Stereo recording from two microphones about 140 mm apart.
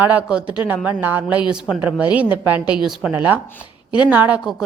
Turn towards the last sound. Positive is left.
turn(degrees=-5)  # may be behind; listen again after turning